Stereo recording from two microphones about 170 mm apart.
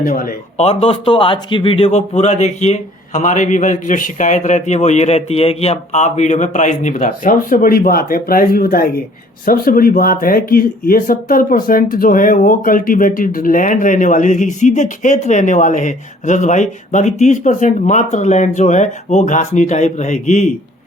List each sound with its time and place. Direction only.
0.0 s speech: 55° left (ahead or behind)
0.5 s speech: 40° left (ahead or behind)